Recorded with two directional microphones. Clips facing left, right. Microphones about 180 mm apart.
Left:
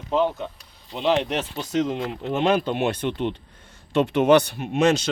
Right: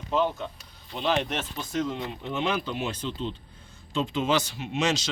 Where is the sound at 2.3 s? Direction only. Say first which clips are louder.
Left 8 dB; 55° left (ahead or behind).